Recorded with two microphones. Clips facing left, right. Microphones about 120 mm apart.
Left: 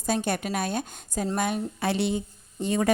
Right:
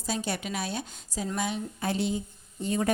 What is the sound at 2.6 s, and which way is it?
Speech, 90° left.